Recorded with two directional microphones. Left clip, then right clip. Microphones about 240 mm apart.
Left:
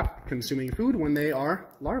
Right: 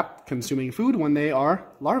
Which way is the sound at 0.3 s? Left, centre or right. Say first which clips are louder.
Right 3 dB; centre.